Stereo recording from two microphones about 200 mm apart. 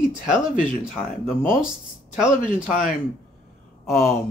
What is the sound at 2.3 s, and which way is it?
Speech, 40° left (ahead or behind).